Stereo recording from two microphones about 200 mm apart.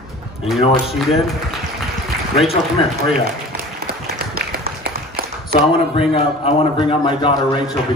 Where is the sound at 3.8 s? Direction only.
50° right (ahead or behind).